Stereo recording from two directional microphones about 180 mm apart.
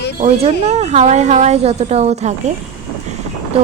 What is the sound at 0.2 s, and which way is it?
A woman's voice, 35° right (ahead or behind).